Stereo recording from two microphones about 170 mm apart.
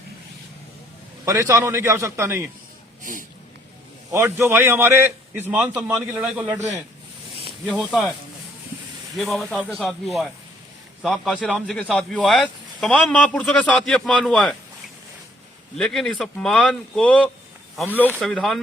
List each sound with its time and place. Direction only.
1.2 s a man's voice: 20° right (ahead or behind)
3.0 s speech: 50° right (ahead or behind)
4.1 s a man's voice: 15° right (ahead or behind)
7.6 s speech: centre (ahead or behind)
9.1 s speech: centre (ahead or behind)
15.8 s speech: centre (ahead or behind)